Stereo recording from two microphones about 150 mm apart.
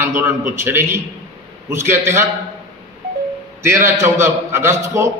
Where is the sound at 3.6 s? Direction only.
20° right (ahead or behind).